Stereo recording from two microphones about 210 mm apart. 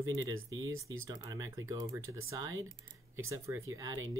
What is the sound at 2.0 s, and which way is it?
Speech, 80° right.